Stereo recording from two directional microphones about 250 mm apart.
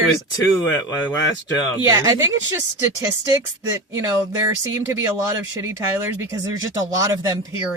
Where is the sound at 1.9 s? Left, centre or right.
Centre.